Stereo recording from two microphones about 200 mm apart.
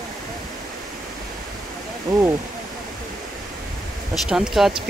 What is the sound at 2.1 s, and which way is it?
Speech, 20° right (ahead or behind).